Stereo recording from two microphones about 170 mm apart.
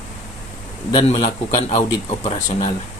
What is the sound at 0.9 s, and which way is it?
A man's voice, 35° left (ahead or behind).